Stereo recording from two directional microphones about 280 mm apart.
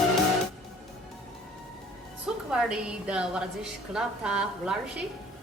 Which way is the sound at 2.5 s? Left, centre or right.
Centre.